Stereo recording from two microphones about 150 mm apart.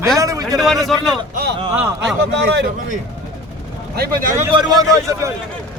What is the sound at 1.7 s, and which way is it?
Speech, 5° right (ahead or behind).